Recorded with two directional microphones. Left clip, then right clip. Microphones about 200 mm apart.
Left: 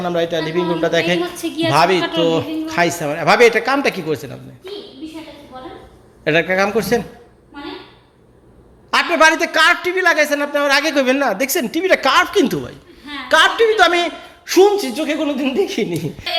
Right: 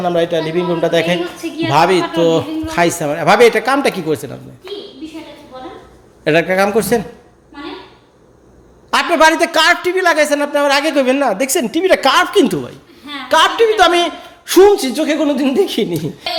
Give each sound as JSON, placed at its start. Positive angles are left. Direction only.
{"t": 0.0, "sound": "a man's voice", "side_deg": -15}
{"t": 5.5, "sound": "a sound", "side_deg": -20}
{"t": 6.2, "sound": "a man's voice", "side_deg": -15}
{"t": 8.9, "sound": "a man's voice", "side_deg": -20}